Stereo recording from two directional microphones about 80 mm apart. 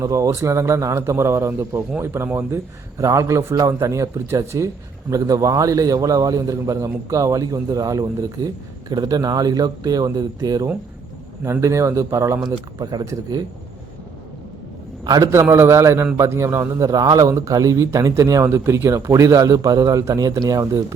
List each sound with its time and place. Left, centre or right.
0.0 s a man's voice: right
3.0 s a man's voice: right
11.6 s a man's voice: right
12.8 s speech: right
15.0 s a man's voice: right
15.3 s a man's voice: right
16.8 s a man's voice: right